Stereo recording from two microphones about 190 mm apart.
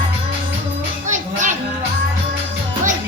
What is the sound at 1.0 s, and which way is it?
Music, 40° right (ahead or behind).